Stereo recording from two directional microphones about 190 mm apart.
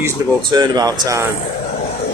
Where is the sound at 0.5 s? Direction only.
20° right (ahead or behind).